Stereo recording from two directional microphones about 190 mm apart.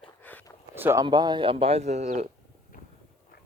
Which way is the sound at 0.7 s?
10° right (ahead or behind).